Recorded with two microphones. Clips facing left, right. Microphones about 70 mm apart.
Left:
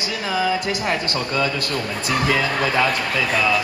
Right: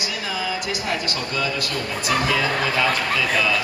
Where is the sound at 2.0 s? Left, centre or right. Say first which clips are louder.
Even; left.